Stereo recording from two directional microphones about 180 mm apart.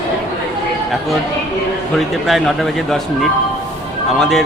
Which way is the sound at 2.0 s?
Centre (ahead or behind).